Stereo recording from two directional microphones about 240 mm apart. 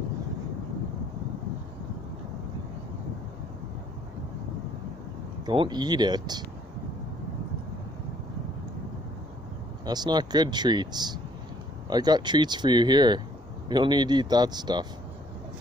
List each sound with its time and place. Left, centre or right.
5.4 s speech: centre
9.8 s speech: centre